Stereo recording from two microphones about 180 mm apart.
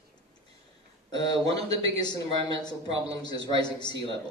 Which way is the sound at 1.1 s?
25° left (ahead or behind).